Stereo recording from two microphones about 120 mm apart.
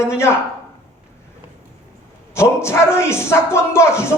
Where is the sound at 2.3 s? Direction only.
20° left (ahead or behind).